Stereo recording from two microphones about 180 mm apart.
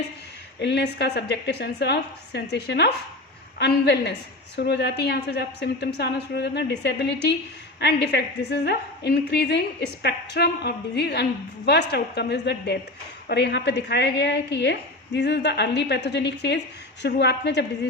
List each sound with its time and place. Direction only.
0.6 s a woman's voice: 70° left (ahead or behind)